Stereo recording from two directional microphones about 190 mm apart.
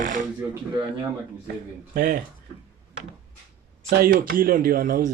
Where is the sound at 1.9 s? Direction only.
45° right (ahead or behind).